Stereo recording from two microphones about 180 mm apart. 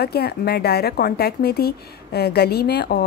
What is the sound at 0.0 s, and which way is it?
Speech, 60° left (ahead or behind).